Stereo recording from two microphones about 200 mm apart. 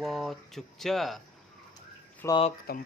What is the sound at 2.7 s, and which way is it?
Speech, 50° left (ahead or behind).